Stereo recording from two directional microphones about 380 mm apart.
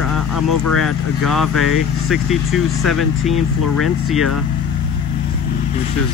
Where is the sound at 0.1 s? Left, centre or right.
Left.